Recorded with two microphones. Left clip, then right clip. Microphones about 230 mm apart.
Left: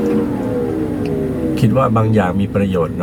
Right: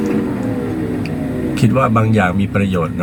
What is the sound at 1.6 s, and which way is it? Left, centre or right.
Speech, centre.